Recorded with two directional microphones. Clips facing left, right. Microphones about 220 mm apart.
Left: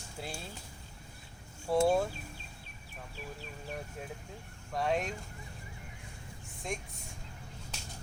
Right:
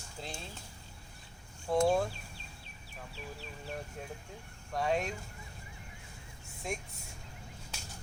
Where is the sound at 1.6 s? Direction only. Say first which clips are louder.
Left 1 dB; 5° left (ahead or behind).